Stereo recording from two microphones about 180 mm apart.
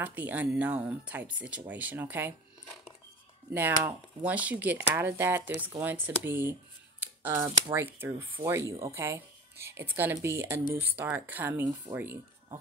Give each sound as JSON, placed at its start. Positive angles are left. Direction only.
{"t": 0.0, "sound": "speech", "side_deg": -10}
{"t": 3.5, "sound": "speech", "side_deg": -10}
{"t": 7.0, "sound": "a sound", "side_deg": -15}
{"t": 7.7, "sound": "speech", "side_deg": -10}